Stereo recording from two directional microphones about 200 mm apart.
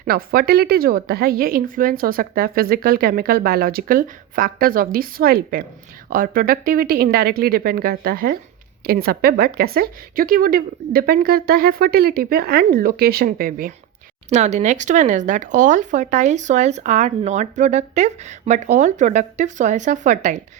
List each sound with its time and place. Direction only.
0.0 s a woman's voice: 45° right (ahead or behind)
14.3 s speech: 35° right (ahead or behind)